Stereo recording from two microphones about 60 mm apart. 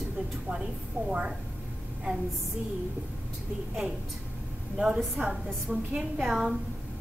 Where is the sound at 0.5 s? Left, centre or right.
Centre.